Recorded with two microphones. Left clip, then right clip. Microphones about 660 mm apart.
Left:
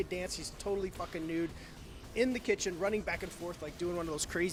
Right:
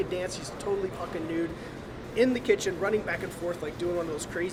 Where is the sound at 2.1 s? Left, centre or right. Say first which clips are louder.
Right 7 dB; left.